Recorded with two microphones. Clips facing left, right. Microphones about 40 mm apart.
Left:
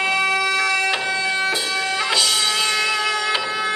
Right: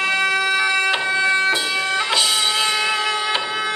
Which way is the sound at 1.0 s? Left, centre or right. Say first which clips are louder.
Right 3 dB; right.